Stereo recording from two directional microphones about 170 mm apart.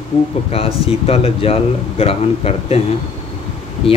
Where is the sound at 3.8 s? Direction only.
35° left (ahead or behind).